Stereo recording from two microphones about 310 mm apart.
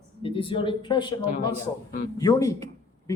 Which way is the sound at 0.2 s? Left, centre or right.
Centre.